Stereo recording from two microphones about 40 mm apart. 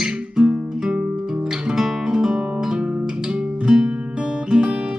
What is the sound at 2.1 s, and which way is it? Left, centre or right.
Music, centre.